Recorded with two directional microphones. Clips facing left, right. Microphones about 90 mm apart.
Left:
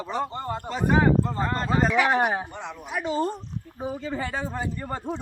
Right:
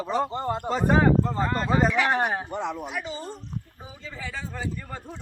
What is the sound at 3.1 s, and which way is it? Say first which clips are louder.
Speech: left 8 dB; 60° left (ahead or behind).